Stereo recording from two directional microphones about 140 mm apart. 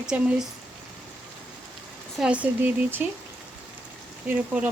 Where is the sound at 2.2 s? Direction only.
10° right (ahead or behind).